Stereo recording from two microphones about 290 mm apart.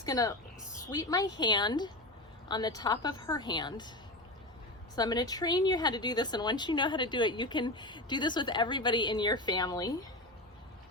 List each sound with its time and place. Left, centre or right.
0.0 s a woman's voice: centre
4.9 s a woman's voice: centre